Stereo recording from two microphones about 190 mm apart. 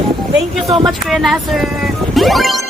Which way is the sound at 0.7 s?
Centre (ahead or behind).